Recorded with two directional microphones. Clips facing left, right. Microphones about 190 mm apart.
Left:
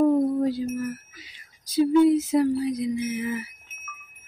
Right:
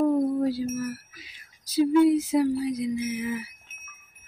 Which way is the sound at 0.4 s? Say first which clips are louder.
Left 1 dB; 5° right (ahead or behind).